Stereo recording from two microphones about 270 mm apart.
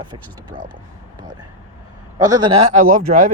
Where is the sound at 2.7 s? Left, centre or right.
Right.